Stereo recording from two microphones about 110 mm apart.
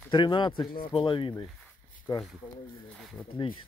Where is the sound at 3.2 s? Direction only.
15° left (ahead or behind).